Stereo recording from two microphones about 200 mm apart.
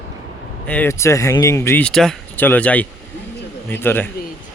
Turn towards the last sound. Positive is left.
turn(degrees=10)  # may be behind; listen again after turning